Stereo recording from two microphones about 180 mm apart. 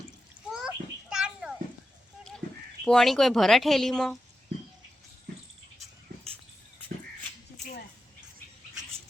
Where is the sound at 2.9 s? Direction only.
5° left (ahead or behind).